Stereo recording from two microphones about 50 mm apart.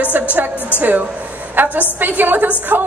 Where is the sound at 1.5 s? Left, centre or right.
Right.